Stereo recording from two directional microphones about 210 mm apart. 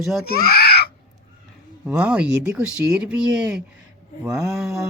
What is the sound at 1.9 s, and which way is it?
Speech, 5° right (ahead or behind).